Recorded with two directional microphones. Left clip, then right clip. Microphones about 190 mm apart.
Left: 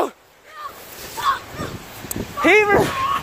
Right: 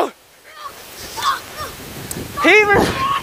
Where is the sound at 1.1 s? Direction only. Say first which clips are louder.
Right 1 dB; 25° right (ahead or behind).